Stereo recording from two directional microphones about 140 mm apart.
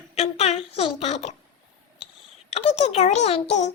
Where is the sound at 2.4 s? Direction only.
45° left (ahead or behind).